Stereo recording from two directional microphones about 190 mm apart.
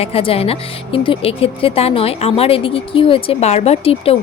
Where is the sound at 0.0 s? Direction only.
30° left (ahead or behind).